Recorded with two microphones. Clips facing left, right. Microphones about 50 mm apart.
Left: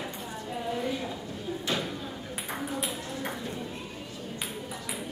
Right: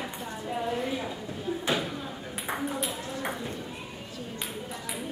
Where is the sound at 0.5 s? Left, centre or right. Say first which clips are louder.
Right 1 dB; centre.